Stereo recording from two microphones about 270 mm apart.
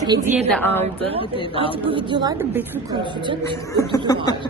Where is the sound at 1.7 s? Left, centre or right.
Centre.